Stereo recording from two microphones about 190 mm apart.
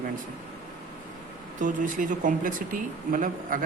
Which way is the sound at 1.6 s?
45° right (ahead or behind).